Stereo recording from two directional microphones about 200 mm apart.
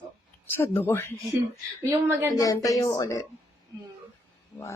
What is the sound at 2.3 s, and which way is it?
Speech, 20° left (ahead or behind).